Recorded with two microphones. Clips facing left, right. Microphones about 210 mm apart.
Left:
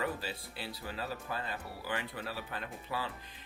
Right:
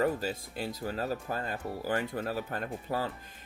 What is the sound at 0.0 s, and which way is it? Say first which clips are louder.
Speech: right 8 dB; 45° right (ahead or behind).